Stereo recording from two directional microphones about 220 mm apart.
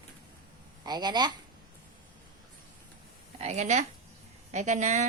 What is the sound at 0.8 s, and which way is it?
Speech, 20° right (ahead or behind).